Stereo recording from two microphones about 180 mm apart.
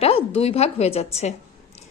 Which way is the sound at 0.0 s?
30° left (ahead or behind).